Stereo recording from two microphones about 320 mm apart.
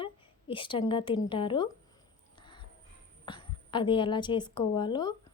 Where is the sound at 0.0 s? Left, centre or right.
Centre.